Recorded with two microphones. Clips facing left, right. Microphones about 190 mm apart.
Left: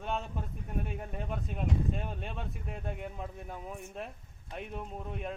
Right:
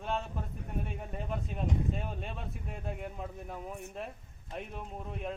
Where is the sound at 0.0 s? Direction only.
Centre (ahead or behind).